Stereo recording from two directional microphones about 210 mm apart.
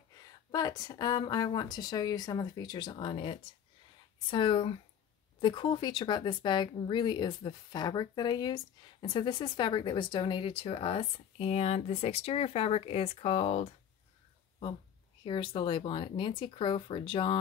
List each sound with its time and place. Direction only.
0.5 s speech: 20° left (ahead or behind)
15.2 s speech: 25° left (ahead or behind)